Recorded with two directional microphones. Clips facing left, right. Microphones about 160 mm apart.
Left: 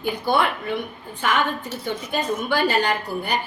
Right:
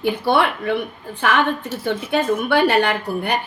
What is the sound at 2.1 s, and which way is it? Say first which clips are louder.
Speech: right 6 dB; 70° right (ahead or behind).